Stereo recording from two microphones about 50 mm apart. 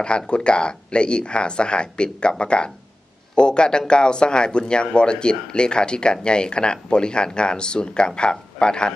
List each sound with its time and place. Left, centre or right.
0.0 s speech: left